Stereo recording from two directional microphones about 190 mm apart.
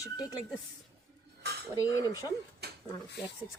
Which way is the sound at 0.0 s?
20° left (ahead or behind).